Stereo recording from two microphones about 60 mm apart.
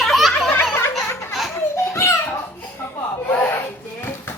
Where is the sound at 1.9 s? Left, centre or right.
Left.